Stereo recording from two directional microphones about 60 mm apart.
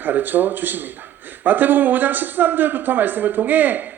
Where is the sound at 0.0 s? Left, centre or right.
Right.